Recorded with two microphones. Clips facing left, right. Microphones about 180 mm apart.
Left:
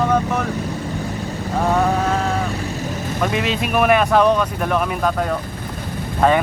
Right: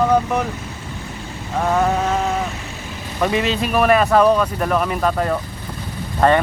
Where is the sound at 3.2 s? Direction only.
Centre (ahead or behind).